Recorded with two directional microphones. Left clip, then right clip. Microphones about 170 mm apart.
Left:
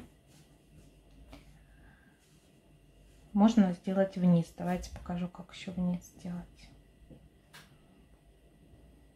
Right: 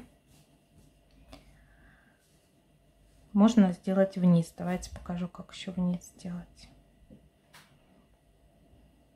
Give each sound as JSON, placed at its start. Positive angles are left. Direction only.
{"t": 3.3, "sound": "speech", "side_deg": -20}